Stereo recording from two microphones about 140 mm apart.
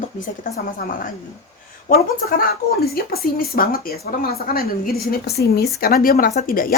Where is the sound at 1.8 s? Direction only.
90° left.